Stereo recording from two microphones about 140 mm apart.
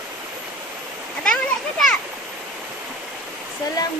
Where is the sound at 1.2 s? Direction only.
5° left (ahead or behind).